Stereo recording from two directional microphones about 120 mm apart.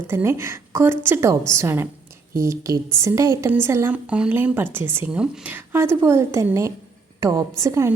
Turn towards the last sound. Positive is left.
turn(degrees=-25)  # may be behind; listen again after turning